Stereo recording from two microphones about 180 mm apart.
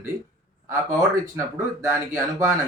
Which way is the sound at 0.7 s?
15° right (ahead or behind).